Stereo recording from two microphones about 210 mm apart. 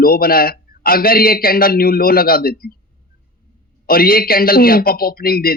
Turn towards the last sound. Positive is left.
turn(degrees=45)  # may be behind; listen again after turning